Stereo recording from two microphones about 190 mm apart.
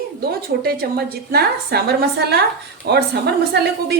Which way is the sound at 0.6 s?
55° right (ahead or behind).